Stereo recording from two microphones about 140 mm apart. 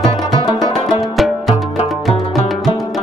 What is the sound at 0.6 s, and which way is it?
Music, centre (ahead or behind).